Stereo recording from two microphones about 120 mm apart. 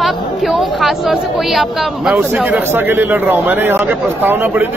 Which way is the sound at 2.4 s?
15° right (ahead or behind).